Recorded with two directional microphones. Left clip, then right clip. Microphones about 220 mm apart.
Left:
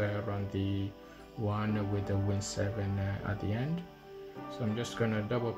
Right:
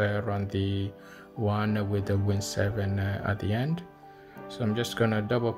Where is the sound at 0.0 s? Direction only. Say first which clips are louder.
Right 6 dB; 40° right (ahead or behind).